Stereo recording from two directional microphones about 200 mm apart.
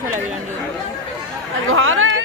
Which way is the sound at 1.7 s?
90° right.